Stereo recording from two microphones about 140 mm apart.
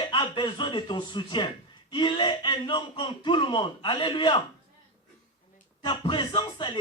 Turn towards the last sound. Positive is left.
turn(degrees=35)  # may be behind; listen again after turning